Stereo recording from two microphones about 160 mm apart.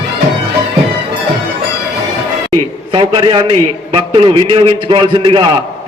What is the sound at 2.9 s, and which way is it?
A man's voice, 30° right (ahead or behind).